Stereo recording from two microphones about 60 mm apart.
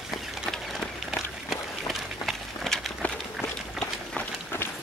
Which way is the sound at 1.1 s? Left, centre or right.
Centre.